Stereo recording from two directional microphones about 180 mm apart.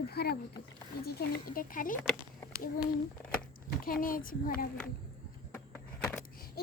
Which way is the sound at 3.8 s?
50° left (ahead or behind).